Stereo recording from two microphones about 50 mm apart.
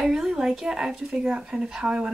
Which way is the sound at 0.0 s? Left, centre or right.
Centre.